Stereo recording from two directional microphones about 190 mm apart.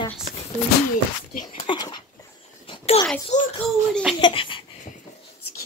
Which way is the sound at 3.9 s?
Centre (ahead or behind).